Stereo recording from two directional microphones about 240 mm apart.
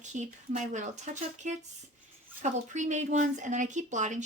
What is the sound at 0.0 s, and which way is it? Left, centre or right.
Speech, right.